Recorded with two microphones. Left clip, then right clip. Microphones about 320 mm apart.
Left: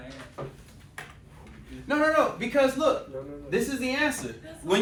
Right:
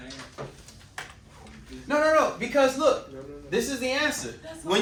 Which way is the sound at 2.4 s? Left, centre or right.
Centre.